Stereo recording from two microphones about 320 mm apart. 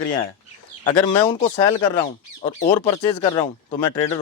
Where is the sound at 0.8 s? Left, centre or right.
Centre.